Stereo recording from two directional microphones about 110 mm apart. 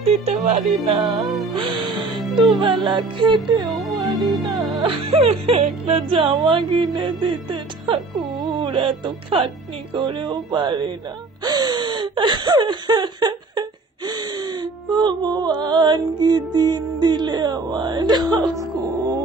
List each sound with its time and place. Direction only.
0.0 s speech: 70° right (ahead or behind)
0.9 s music: 45° right (ahead or behind)
4.7 s music: 55° right (ahead or behind)
11.4 s a sound: 40° right (ahead or behind)
15.6 s music: 40° right (ahead or behind)